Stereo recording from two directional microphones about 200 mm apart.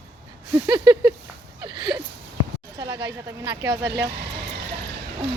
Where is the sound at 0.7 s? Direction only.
25° right (ahead or behind).